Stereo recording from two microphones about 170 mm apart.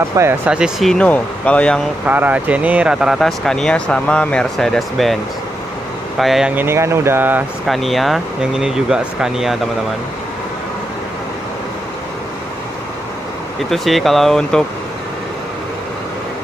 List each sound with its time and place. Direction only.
0.1 s speech: 15° right (ahead or behind)
0.5 s speech: 5° right (ahead or behind)
2.0 s speech: 10° right (ahead or behind)
7.6 s speech: centre (ahead or behind)
13.7 s speech: centre (ahead or behind)